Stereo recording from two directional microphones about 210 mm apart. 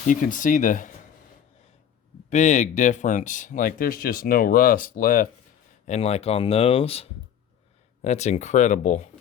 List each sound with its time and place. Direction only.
0.1 s speech: 40° left (ahead or behind)
2.3 s speech: 35° left (ahead or behind)
5.8 s speech: 30° left (ahead or behind)